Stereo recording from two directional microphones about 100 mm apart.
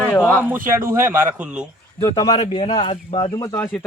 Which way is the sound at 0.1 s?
15° left (ahead or behind).